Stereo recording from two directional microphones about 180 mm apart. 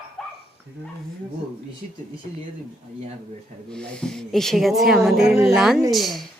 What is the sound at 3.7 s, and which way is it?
Speech, 5° left (ahead or behind).